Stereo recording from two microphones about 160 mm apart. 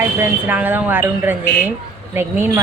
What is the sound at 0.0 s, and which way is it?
Speech, 10° right (ahead or behind).